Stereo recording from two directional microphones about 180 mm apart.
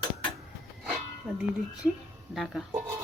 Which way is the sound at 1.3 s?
5° right (ahead or behind).